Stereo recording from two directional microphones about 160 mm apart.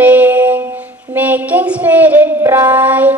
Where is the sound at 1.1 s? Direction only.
10° right (ahead or behind).